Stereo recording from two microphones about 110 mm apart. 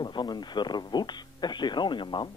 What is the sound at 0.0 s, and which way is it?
Speech, 40° left (ahead or behind).